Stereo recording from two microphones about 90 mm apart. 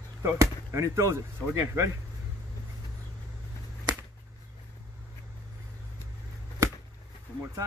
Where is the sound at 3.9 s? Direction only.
50° right (ahead or behind).